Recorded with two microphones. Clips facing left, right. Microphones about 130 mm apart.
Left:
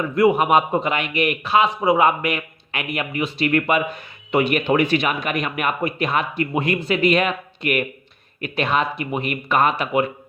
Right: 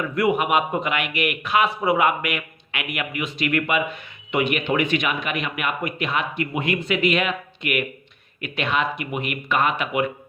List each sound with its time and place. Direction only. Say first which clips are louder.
0.0 s speech: left 4 dB; 30° left (ahead or behind)